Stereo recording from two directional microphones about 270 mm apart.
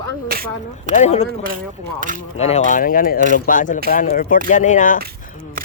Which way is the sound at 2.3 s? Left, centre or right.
Left.